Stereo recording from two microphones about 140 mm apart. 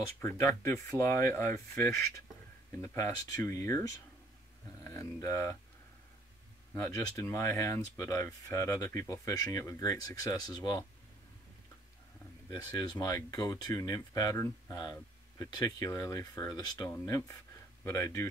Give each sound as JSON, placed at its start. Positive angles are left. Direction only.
{"t": 0.2, "sound": "speech", "side_deg": 20}
{"t": 4.8, "sound": "speech", "side_deg": 20}
{"t": 6.7, "sound": "speech", "side_deg": 25}
{"t": 12.4, "sound": "speech", "side_deg": 25}